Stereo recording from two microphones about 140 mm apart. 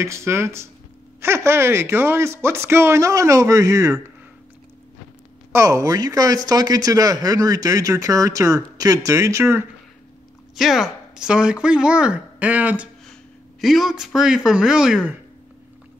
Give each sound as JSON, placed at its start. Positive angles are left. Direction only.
{"t": 0.0, "sound": "speech", "side_deg": -20}
{"t": 5.5, "sound": "speech", "side_deg": -20}
{"t": 10.5, "sound": "speech", "side_deg": 0}